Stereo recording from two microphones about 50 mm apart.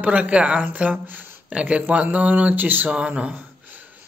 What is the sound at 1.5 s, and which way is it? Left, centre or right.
Mantra, right.